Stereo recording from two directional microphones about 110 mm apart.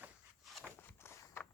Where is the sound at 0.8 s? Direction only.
20° left (ahead or behind).